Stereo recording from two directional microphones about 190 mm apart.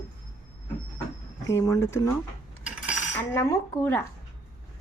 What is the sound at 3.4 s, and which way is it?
Speech, 15° left (ahead or behind).